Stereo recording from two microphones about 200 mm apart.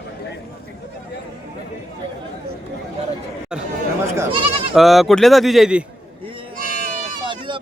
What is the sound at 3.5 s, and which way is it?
Chatter, 5° right (ahead or behind).